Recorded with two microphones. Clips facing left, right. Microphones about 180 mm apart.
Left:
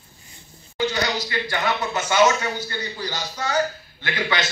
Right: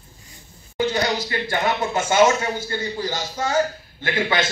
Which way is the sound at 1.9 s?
50° right (ahead or behind).